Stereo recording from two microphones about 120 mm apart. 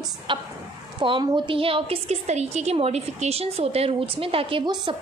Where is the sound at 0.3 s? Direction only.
45° right (ahead or behind).